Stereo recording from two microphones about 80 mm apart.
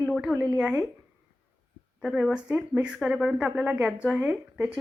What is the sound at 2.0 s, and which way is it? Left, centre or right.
Speech, centre.